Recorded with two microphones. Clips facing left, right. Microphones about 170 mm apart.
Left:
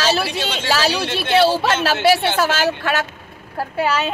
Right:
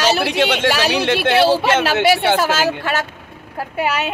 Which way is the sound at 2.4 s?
10° right (ahead or behind).